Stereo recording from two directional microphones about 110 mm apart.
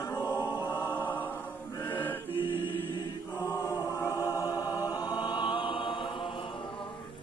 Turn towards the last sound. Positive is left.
turn(degrees=50)  # may be behind; listen again after turning